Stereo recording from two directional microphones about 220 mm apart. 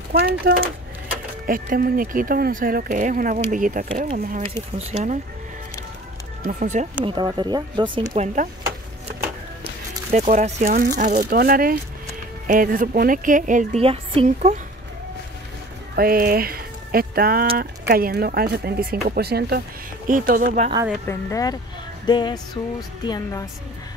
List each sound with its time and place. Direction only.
0.1 s speech: 45° right (ahead or behind)
6.4 s speech: 35° right (ahead or behind)
7.1 s speech: 20° right (ahead or behind)
8.1 s speech: 35° right (ahead or behind)
10.1 s speech: 30° right (ahead or behind)
16.0 s speech: 40° right (ahead or behind)
21.1 s speech: 15° left (ahead or behind)
22.0 s music: 20° left (ahead or behind)